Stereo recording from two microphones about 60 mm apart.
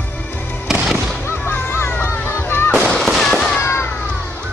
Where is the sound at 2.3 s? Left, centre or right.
Left.